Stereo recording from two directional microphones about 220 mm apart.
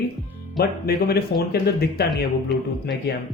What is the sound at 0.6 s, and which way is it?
Speech, 45° left (ahead or behind).